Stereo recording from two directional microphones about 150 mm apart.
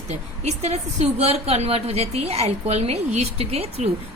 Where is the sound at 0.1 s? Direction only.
50° right (ahead or behind).